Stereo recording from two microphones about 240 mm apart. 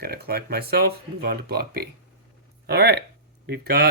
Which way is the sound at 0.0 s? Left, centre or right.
Right.